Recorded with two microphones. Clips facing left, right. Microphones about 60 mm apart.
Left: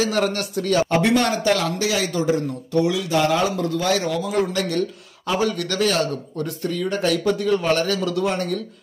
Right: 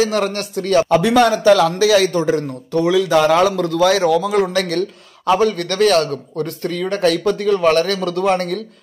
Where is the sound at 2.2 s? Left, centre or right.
Right.